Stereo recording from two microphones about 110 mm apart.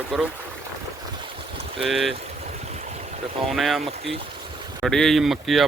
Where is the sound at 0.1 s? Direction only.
Centre (ahead or behind).